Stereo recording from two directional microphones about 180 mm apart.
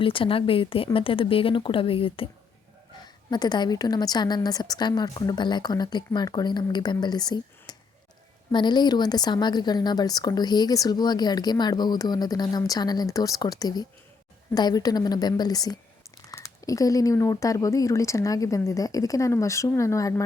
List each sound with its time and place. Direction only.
0.0 s a woman's voice: 30° left (ahead or behind)